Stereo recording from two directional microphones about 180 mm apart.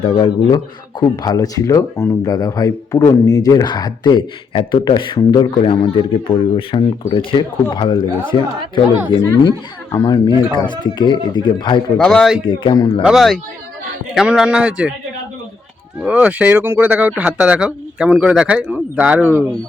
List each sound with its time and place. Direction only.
0.0 s speech: 25° left (ahead or behind)
11.9 s a man's voice: 5° left (ahead or behind)
12.5 s speech: 25° left (ahead or behind)
13.0 s a man's voice: centre (ahead or behind)
16.0 s speech: 5° right (ahead or behind)